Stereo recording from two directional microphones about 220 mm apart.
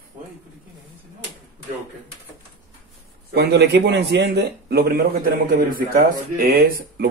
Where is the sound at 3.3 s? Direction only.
50° right (ahead or behind).